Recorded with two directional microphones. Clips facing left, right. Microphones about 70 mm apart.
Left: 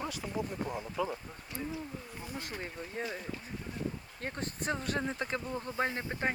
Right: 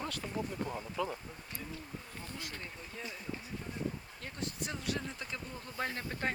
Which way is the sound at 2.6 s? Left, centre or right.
Left.